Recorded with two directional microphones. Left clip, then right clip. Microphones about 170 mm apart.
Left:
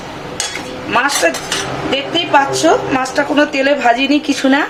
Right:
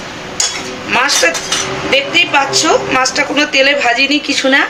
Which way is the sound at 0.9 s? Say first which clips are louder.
Right 2 dB; 35° left (ahead or behind).